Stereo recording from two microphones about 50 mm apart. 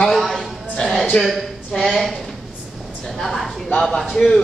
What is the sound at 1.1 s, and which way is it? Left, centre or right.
Speech, left.